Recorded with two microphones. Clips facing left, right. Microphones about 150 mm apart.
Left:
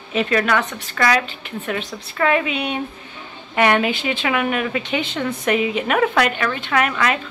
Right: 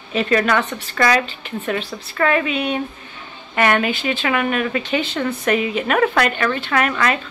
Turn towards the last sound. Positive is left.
turn(degrees=10)  # may be behind; listen again after turning